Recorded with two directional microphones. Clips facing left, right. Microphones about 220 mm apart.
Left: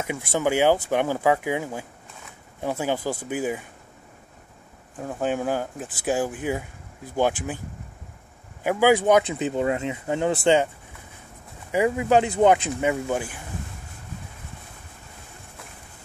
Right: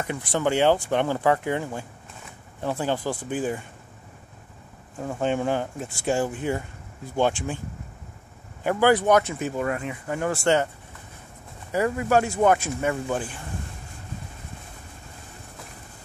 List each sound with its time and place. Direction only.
0.0 s speech: 10° left (ahead or behind)
4.9 s speech: 5° left (ahead or behind)
8.6 s speech: 10° left (ahead or behind)
11.7 s speech: 15° left (ahead or behind)